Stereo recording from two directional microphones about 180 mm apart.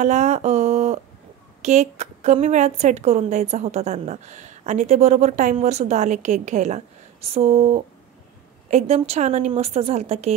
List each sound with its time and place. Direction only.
0.0 s a woman's voice: 40° right (ahead or behind)